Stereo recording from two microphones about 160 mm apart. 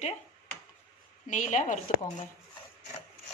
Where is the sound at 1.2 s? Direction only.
50° left (ahead or behind).